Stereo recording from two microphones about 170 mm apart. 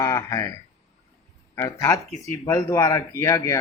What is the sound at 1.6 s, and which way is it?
Speech, 20° left (ahead or behind).